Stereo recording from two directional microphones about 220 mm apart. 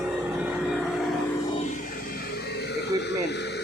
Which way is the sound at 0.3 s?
5° right (ahead or behind).